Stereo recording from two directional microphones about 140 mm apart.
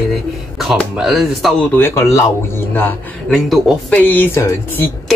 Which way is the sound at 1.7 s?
20° left (ahead or behind).